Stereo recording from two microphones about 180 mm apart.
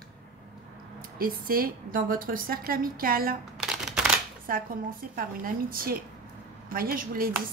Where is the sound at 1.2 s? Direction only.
55° right (ahead or behind).